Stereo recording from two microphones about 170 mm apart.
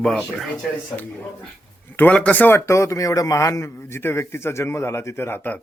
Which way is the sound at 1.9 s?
10° left (ahead or behind).